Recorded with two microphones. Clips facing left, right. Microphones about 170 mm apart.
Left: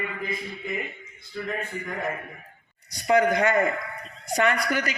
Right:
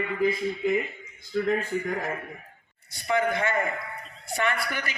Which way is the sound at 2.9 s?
40° left (ahead or behind).